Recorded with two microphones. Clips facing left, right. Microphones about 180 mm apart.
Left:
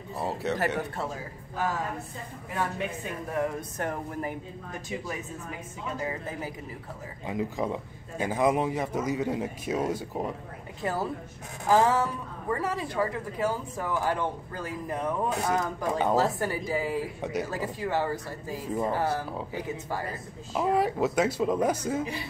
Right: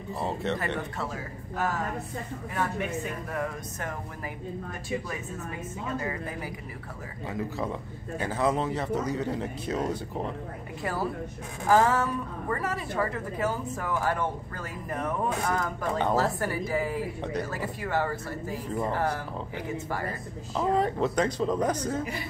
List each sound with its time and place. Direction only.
0.2 s speech: 5° left (ahead or behind)
7.2 s a woman's voice: 15° left (ahead or behind)
10.8 s a woman's voice: 20° left (ahead or behind)